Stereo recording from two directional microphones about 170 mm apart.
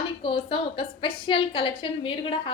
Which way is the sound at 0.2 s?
30° left (ahead or behind).